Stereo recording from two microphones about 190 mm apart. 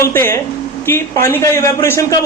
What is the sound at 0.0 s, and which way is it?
A man's voice, 15° left (ahead or behind).